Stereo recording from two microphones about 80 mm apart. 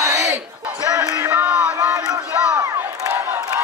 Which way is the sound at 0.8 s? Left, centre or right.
Right.